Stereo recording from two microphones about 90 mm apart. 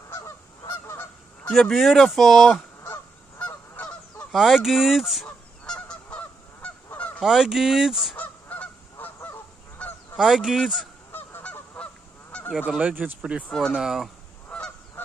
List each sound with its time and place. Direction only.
1.5 s speech: centre (ahead or behind)
3.3 s goose: 15° left (ahead or behind)
4.3 s goose: 5° right (ahead or behind)
5.8 s goose: 15° left (ahead or behind)
7.2 s speech: 5° right (ahead or behind)
8.2 s goose: 20° left (ahead or behind)
10.1 s speech: 5° right (ahead or behind)
11.1 s goose: 20° left (ahead or behind)
12.5 s speech: 10° right (ahead or behind)
13.5 s speech: 10° left (ahead or behind)
13.7 s speech: 5° right (ahead or behind)
14.5 s goose: 10° left (ahead or behind)